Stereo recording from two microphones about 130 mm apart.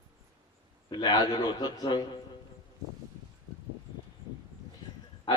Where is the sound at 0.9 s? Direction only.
35° left (ahead or behind).